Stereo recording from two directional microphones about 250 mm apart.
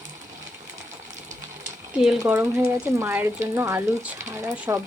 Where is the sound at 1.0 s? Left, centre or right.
Right.